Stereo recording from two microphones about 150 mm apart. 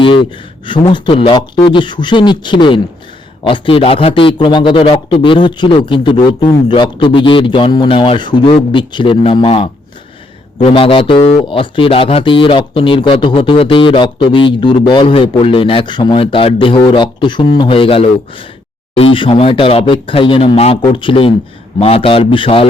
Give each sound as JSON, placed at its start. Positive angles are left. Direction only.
{"t": 0.6, "sound": "speech", "side_deg": 30}